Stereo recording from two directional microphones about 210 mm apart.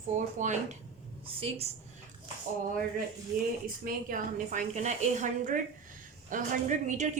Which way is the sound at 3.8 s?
40° right (ahead or behind).